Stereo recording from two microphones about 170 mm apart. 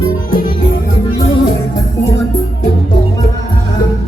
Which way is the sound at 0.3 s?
55° left (ahead or behind).